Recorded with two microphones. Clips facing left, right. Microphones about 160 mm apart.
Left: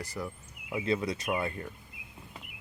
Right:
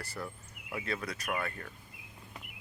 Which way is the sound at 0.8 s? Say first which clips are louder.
Left 8 dB; 25° left (ahead or behind).